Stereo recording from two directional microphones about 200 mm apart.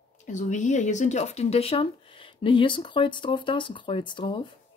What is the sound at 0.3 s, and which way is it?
Speech, 40° left (ahead or behind).